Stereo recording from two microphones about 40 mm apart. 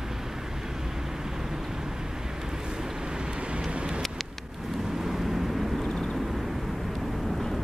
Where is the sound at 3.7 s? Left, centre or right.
Right.